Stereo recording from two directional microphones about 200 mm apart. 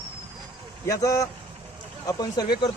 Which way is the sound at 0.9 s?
15° left (ahead or behind).